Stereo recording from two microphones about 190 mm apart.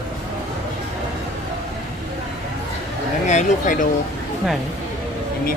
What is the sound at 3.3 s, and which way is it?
Speech, 40° left (ahead or behind).